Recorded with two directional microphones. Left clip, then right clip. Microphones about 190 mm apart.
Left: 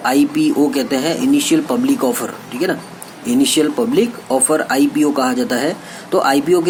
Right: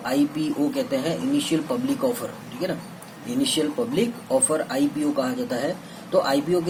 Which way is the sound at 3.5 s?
25° left (ahead or behind).